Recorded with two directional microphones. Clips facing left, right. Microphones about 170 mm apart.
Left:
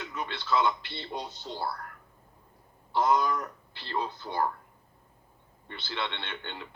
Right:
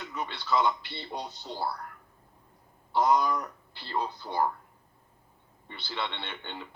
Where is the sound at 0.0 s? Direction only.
5° right (ahead or behind).